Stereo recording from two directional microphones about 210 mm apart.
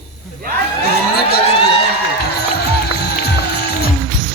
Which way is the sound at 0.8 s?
50° left (ahead or behind).